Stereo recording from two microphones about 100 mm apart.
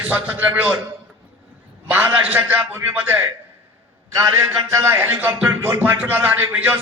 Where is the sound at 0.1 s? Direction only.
20° right (ahead or behind).